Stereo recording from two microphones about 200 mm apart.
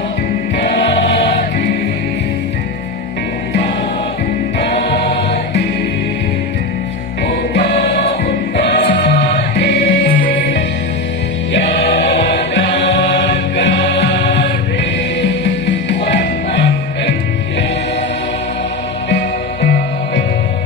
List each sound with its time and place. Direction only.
4.6 s music: 50° left (ahead or behind)
7.2 s music: 50° left (ahead or behind)
11.5 s choir: 60° left (ahead or behind)
19.0 s music: 55° left (ahead or behind)